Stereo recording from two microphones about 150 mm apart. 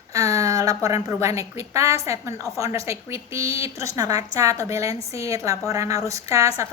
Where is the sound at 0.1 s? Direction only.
20° right (ahead or behind).